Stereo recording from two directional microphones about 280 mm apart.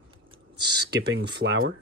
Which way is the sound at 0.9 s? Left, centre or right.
Right.